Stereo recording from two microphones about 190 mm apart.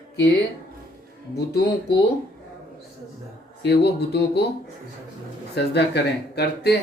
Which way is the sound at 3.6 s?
60° left (ahead or behind).